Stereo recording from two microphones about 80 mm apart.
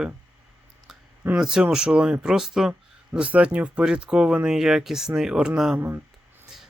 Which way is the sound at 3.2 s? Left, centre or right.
Centre.